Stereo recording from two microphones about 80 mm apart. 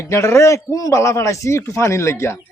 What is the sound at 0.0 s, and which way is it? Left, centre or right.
A man's voice, left.